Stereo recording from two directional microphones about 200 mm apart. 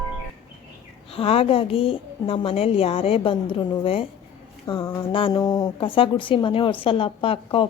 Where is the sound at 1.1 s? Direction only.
30° left (ahead or behind).